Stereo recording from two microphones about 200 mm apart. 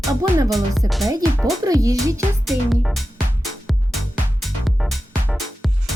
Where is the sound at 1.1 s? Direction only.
15° right (ahead or behind).